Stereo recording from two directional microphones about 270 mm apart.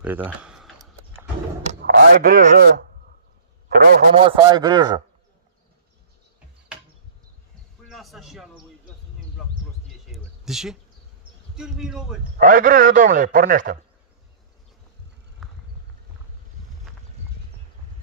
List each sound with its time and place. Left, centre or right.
0.0 s speech: centre
1.6 s speech: right
3.7 s a man's voice: right
7.9 s speech: centre
9.8 s a sound: centre
11.5 s speech: centre
12.4 s a man's voice: right
15.4 s clip-clop: centre